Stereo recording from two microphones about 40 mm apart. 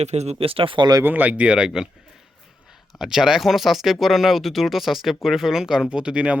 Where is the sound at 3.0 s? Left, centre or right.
Centre.